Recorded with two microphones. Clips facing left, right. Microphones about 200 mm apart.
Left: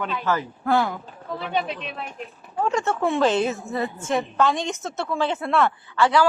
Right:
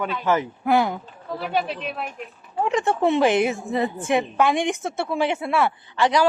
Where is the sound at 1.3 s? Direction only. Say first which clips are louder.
Right 2 dB; 5° right (ahead or behind).